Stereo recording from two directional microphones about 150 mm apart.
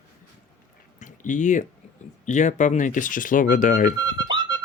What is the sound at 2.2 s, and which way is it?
Speech, 50° left (ahead or behind).